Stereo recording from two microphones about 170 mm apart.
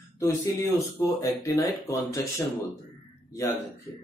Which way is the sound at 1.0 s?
20° left (ahead or behind).